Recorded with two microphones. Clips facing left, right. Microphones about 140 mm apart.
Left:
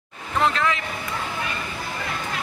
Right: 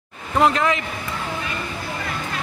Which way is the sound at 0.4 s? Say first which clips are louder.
Right 4 dB; 20° right (ahead or behind).